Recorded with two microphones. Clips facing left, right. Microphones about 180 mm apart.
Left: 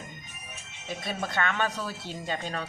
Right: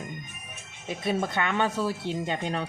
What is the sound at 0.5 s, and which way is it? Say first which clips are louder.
Music: right 1 dB; 55° right (ahead or behind).